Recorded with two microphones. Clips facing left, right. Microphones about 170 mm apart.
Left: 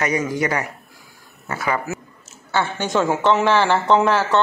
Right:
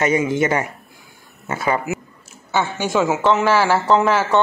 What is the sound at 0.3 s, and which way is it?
Speech, 25° right (ahead or behind).